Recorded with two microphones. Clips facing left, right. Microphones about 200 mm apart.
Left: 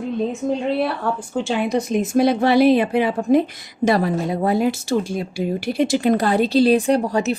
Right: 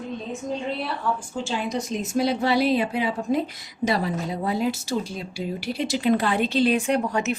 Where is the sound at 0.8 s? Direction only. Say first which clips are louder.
Left 5 dB; 60° left (ahead or behind).